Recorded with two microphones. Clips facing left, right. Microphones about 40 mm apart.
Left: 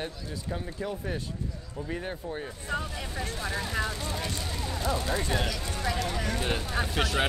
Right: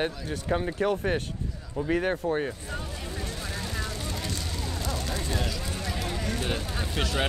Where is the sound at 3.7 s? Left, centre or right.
Centre.